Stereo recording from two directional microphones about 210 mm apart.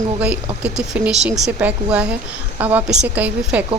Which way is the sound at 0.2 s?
5° right (ahead or behind).